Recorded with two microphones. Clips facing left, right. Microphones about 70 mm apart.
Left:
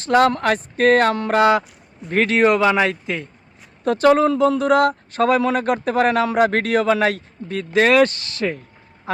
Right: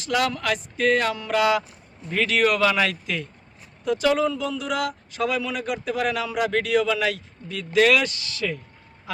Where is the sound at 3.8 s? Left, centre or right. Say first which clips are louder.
Left 6 dB; left.